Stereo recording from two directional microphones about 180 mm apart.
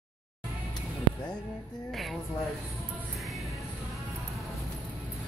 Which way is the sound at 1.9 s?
Centre (ahead or behind).